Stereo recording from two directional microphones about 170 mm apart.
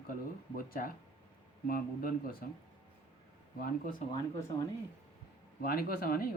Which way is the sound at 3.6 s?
55° left (ahead or behind).